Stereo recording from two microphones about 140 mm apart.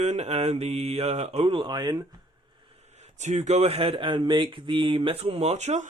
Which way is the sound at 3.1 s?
55° right (ahead or behind).